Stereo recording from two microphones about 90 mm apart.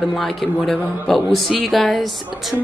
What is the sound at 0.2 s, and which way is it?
A woman's voice, centre (ahead or behind).